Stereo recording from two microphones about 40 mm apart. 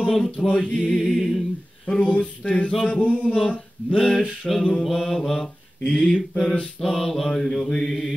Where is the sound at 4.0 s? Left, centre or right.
Centre.